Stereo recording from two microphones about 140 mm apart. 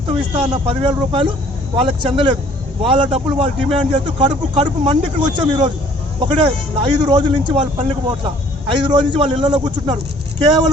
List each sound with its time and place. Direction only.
0.3 s speech: 35° right (ahead or behind)